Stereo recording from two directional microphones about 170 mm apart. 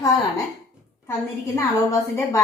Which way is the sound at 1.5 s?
15° left (ahead or behind).